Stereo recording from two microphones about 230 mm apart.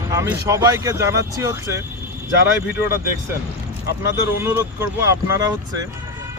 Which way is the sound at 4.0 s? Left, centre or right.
Centre.